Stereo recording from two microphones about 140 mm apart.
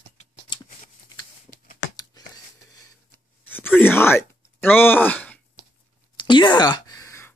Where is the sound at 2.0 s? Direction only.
25° left (ahead or behind).